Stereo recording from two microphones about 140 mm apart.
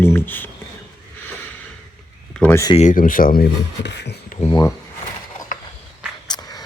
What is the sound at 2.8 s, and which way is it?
Speech, 70° left (ahead or behind).